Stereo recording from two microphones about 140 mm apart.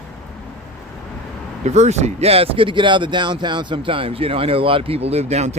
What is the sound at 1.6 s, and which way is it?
Speech, 55° right (ahead or behind).